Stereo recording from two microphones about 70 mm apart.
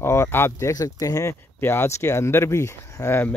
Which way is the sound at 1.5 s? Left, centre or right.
Left.